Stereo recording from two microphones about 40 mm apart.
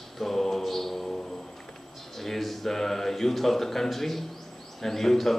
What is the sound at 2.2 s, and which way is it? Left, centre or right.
A man's voice, centre.